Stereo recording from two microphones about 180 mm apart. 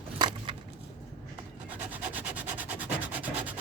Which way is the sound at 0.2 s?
25° right (ahead or behind).